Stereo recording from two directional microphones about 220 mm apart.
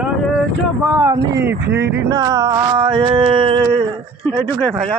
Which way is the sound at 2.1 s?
15° right (ahead or behind).